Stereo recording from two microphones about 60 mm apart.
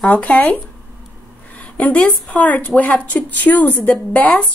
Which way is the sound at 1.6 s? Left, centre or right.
Left.